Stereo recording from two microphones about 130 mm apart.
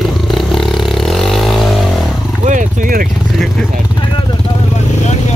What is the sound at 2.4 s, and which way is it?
Speech, 75° right (ahead or behind).